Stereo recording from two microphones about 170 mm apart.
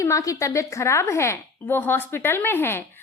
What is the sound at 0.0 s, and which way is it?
A woman's voice, 20° left (ahead or behind).